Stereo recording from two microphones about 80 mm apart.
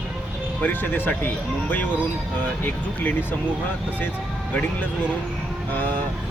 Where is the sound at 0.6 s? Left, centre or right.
Left.